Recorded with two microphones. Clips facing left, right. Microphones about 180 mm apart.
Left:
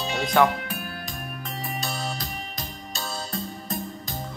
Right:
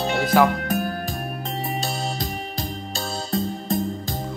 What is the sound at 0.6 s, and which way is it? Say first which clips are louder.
Music: right 10 dB; 45° right (ahead or behind).